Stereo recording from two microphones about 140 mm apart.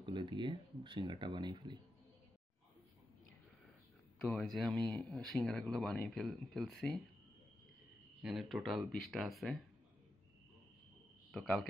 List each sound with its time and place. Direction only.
0.0 s speech: 35° right (ahead or behind)
4.3 s speech: 5° left (ahead or behind)
8.2 s speech: centre (ahead or behind)
11.3 s speech: 5° left (ahead or behind)